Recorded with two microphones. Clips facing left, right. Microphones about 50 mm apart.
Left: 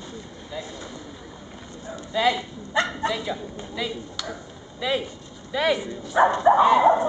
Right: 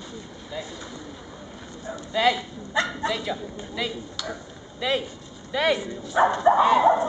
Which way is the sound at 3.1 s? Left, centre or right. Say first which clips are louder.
Even; centre.